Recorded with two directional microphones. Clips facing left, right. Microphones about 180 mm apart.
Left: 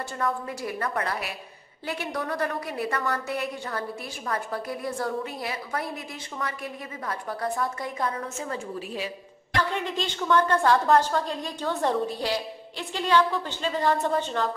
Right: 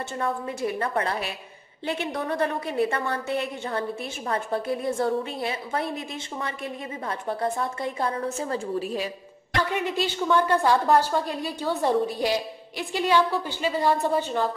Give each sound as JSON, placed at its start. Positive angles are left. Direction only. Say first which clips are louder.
{"t": 0.2, "sound": "a woman's voice", "louder": "right 2 dB", "side_deg": -25}
{"t": 9.7, "sound": "a woman's voice", "louder": "right 3 dB", "side_deg": -10}